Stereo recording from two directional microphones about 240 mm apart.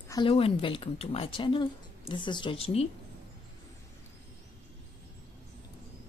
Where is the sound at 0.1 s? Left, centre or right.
Left.